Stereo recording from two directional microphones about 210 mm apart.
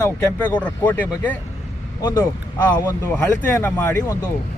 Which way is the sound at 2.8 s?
10° left (ahead or behind).